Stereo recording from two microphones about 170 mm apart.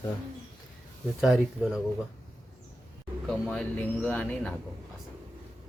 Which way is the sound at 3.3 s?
5° left (ahead or behind).